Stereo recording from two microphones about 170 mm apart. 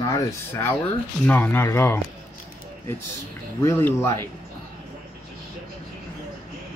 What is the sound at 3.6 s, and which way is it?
Speech, 15° left (ahead or behind).